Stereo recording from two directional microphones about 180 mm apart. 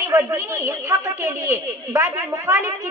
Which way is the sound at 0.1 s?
15° right (ahead or behind).